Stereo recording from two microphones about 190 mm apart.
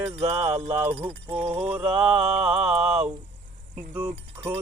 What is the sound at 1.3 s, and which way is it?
Music, 10° right (ahead or behind).